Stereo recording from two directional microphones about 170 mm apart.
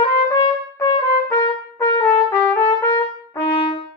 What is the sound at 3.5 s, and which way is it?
Brass instrument, 35° left (ahead or behind).